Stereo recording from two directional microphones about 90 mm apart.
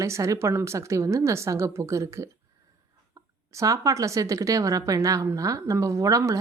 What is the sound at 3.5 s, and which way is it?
A woman's voice, 40° right (ahead or behind).